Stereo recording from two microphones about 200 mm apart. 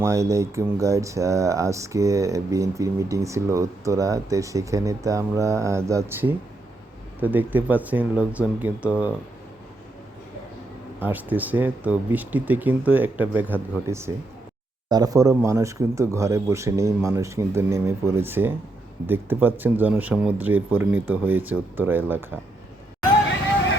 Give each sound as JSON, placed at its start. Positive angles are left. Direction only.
{"t": 0.0, "sound": "speech", "side_deg": -15}
{"t": 11.0, "sound": "speech", "side_deg": -10}